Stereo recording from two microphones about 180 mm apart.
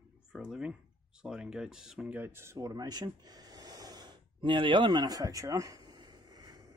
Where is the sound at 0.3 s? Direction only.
5° right (ahead or behind).